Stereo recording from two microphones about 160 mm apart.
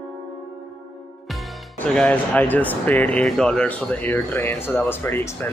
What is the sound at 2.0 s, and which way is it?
Speech, 10° left (ahead or behind).